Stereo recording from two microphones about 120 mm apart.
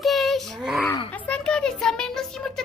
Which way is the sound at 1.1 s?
10° left (ahead or behind).